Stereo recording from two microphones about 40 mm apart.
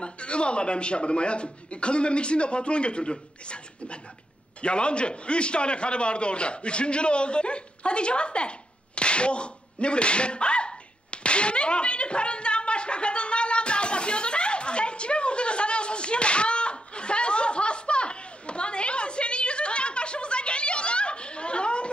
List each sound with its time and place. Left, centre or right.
0.0 s a man's voice: left
11.1 s slap: left